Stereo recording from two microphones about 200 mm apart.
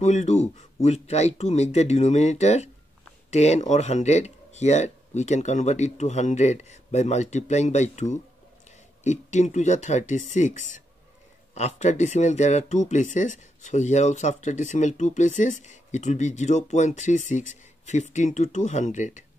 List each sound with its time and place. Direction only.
0.0 s speech: 35° left (ahead or behind)